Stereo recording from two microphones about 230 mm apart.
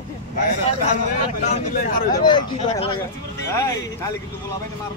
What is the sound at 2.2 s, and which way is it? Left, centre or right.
A man's voice, centre.